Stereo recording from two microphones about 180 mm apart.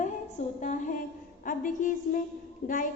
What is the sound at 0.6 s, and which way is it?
A woman's voice, 40° left (ahead or behind).